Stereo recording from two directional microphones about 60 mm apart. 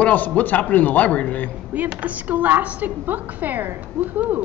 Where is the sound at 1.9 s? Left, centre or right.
Right.